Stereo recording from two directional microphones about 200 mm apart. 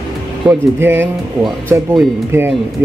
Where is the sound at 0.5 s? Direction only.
10° right (ahead or behind).